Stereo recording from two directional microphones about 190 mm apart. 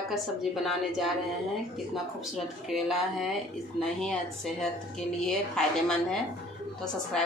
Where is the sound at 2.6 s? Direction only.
Centre (ahead or behind).